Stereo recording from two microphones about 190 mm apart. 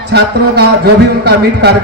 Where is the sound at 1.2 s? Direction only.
60° right (ahead or behind).